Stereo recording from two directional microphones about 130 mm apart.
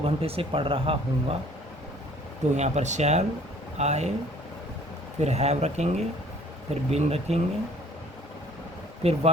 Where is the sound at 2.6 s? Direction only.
60° right (ahead or behind).